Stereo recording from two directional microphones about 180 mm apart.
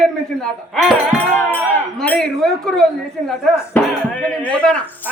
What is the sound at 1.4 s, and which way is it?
Speech, 10° left (ahead or behind).